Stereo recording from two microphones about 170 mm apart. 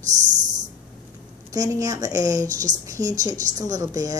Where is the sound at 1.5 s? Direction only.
20° right (ahead or behind).